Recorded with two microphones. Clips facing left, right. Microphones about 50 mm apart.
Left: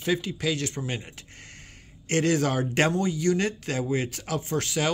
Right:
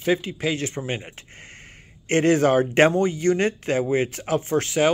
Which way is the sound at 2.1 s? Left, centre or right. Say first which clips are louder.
Right 6 dB; right.